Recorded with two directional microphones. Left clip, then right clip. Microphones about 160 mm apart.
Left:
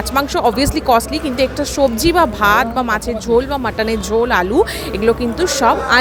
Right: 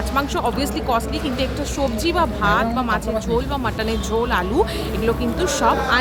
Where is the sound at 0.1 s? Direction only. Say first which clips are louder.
Left 6 dB; 40° left (ahead or behind).